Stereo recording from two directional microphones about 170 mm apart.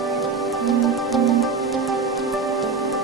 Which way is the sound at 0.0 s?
Centre (ahead or behind).